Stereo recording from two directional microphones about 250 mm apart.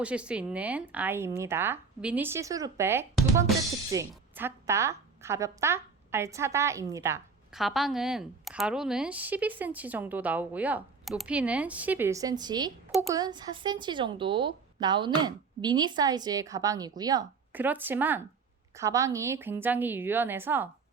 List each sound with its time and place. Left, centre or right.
0.0 s a woman's voice: centre